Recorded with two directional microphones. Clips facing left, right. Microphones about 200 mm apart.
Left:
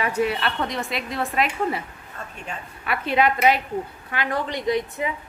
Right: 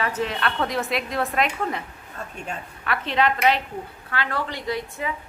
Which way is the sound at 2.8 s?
10° left (ahead or behind).